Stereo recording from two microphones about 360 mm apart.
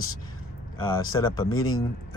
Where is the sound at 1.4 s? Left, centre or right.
Left.